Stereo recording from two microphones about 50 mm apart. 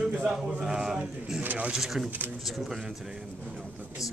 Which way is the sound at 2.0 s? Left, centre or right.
Right.